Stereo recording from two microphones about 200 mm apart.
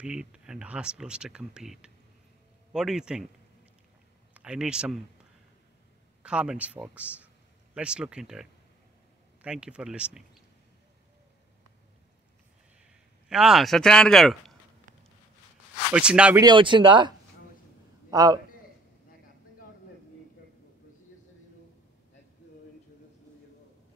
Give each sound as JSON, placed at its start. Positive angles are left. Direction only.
{"t": 0.0, "sound": "speech", "side_deg": -5}
{"t": 4.3, "sound": "speech", "side_deg": -5}
{"t": 6.2, "sound": "speech", "side_deg": -5}
{"t": 13.3, "sound": "speech", "side_deg": 0}
{"t": 15.9, "sound": "speech", "side_deg": -5}
{"t": 16.3, "sound": "speech", "side_deg": -20}
{"t": 18.1, "sound": "a man's voice", "side_deg": -20}